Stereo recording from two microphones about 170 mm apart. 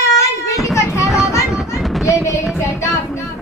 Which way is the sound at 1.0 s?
Centre (ahead or behind).